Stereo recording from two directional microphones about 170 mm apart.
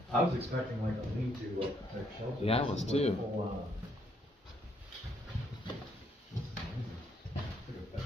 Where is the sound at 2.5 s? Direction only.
35° left (ahead or behind).